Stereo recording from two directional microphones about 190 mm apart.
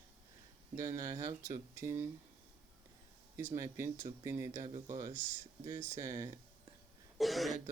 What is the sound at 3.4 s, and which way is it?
Speech, 15° right (ahead or behind).